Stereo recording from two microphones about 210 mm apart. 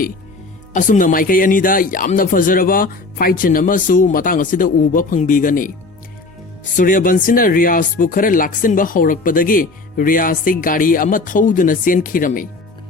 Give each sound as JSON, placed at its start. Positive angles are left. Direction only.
{"t": 0.7, "sound": "speech", "side_deg": 40}
{"t": 6.7, "sound": "speech", "side_deg": 40}